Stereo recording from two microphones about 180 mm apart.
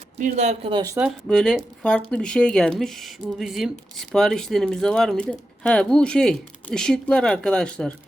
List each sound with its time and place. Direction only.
0.2 s speech: 40° right (ahead or behind)
0.7 s speech: 20° right (ahead or behind)
1.3 s speech: 5° left (ahead or behind)